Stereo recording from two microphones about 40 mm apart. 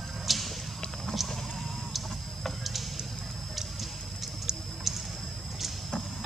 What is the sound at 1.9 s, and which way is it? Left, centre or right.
Tick-tock, centre.